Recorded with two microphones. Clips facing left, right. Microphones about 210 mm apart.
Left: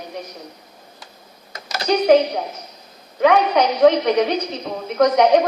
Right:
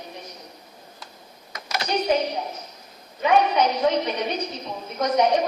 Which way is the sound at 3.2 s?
80° left.